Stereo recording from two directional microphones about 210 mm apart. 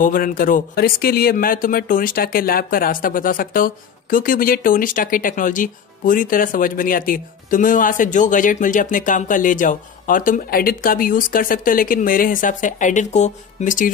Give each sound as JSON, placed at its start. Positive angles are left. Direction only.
{"t": 0.0, "sound": "speech", "side_deg": 40}